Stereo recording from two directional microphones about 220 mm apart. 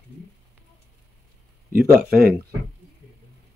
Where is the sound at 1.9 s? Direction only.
45° right (ahead or behind).